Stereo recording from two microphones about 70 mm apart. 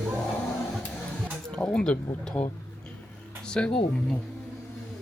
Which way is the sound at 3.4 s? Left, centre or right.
Centre.